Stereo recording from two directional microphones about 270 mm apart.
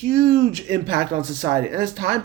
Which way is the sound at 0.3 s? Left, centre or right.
Right.